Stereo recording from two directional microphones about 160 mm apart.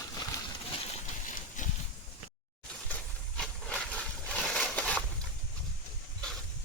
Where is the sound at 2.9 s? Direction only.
5° left (ahead or behind).